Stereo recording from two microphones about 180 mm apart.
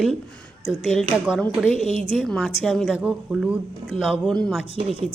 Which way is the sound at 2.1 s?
Centre (ahead or behind).